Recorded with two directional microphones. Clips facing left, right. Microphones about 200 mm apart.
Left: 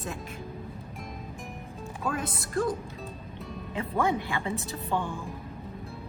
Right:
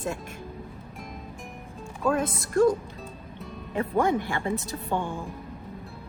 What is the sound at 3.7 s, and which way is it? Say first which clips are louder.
Speech: right 4 dB; 50° right (ahead or behind).